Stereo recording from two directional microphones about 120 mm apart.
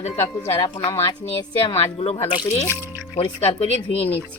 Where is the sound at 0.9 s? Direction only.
55° left (ahead or behind).